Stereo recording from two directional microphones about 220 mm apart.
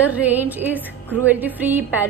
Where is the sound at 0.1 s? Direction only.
10° right (ahead or behind).